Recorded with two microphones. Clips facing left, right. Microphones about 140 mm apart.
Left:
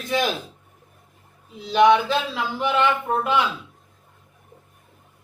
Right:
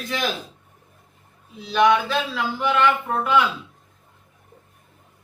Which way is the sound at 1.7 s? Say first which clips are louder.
Left 2 dB; 20° left (ahead or behind).